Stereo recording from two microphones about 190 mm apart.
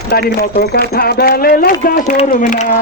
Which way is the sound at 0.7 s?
55° left (ahead or behind).